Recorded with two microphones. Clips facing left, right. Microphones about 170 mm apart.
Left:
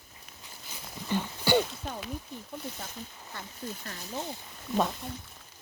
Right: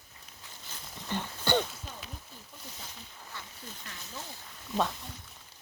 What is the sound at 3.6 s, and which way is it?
Speech, 45° left (ahead or behind).